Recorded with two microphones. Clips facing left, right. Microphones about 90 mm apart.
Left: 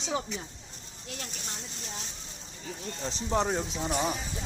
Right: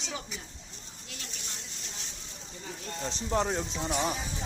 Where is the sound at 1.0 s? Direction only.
45° left (ahead or behind).